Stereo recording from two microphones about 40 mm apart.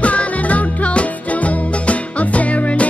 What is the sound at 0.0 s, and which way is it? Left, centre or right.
Music, left.